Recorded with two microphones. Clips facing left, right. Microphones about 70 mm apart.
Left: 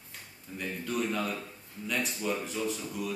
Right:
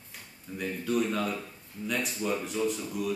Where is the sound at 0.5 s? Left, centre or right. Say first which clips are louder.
Right 4 dB; centre.